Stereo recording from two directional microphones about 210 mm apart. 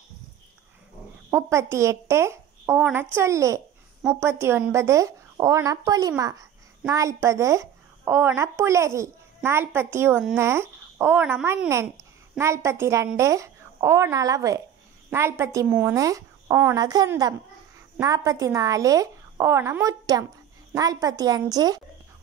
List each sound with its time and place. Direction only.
1.3 s a woman's voice: 10° right (ahead or behind)